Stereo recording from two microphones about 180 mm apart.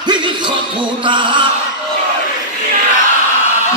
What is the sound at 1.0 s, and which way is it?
Speech, 25° right (ahead or behind).